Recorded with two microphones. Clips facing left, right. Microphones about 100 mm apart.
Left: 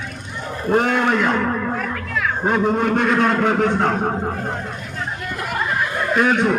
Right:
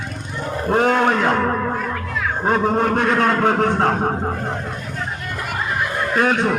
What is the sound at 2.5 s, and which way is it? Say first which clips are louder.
A man's voice: right 1 dB; 45° right (ahead or behind).